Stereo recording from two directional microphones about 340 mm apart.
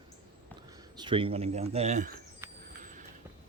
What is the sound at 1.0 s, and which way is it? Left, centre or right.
Speech, centre.